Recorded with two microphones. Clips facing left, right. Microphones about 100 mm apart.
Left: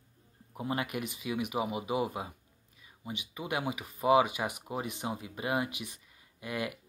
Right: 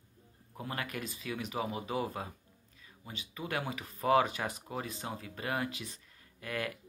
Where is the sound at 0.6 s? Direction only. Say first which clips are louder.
Left 5 dB; 20° left (ahead or behind).